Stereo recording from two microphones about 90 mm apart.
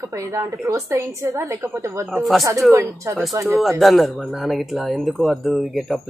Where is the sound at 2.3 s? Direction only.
Centre (ahead or behind).